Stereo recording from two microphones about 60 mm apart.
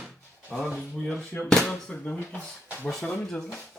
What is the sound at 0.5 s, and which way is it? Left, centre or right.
Speech, centre.